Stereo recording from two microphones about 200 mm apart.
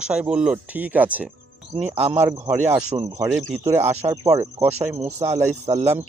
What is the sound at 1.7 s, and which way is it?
Speech, 30° right (ahead or behind).